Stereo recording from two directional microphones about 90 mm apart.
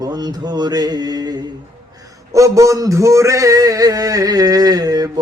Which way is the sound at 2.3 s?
35° right (ahead or behind).